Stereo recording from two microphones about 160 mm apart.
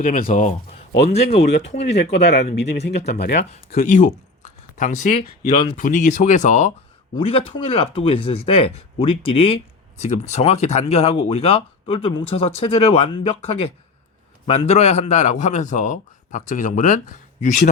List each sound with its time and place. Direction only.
0.0 s speech: 60° left (ahead or behind)
1.4 s speech: 90° left
3.8 s a man's voice: 55° left (ahead or behind)
7.2 s a man's voice: 35° left (ahead or behind); by 17.6 s 50° left (ahead or behind)